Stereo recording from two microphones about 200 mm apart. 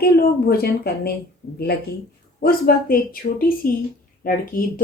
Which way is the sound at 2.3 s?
50° left (ahead or behind).